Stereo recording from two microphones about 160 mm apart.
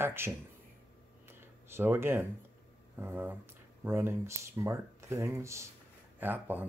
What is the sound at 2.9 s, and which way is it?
Speech, 15° right (ahead or behind).